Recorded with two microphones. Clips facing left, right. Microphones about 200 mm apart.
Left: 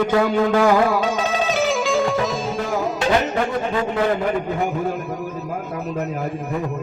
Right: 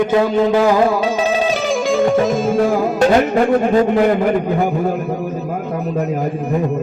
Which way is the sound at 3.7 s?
40° right (ahead or behind).